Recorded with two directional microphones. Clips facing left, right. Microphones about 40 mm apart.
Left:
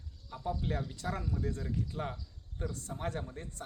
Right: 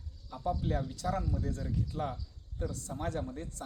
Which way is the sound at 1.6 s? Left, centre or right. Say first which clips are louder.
Right 2 dB; centre.